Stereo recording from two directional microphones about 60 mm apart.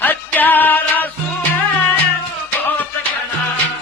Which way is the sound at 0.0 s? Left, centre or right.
Left.